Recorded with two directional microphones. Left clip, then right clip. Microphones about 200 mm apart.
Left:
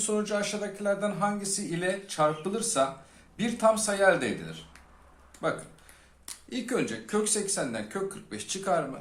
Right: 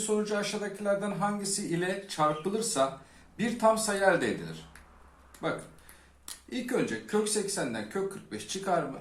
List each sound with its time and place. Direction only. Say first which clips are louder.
0.0 s a man's voice: left 1 dB; 35° left (ahead or behind)
5.4 s a man's voice: left 3 dB; 40° left (ahead or behind)